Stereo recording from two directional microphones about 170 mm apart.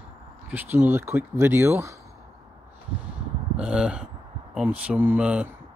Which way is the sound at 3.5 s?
5° right (ahead or behind).